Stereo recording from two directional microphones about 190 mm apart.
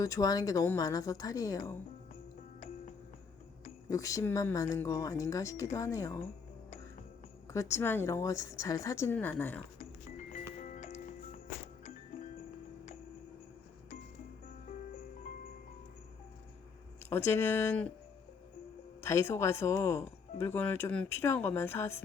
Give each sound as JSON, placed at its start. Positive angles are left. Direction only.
{"t": 0.0, "sound": "a woman's voice", "side_deg": 20}
{"t": 3.8, "sound": "speech", "side_deg": 15}
{"t": 7.4, "sound": "speech", "side_deg": 15}
{"t": 9.7, "sound": "music", "side_deg": 40}
{"t": 17.1, "sound": "speech", "side_deg": 15}
{"t": 19.0, "sound": "speech", "side_deg": 15}